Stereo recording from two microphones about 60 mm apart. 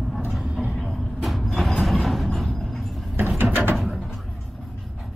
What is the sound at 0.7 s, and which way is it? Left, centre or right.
Vehicle, centre.